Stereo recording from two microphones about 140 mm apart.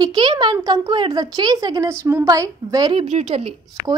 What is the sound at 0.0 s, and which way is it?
A woman's voice, 30° right (ahead or behind).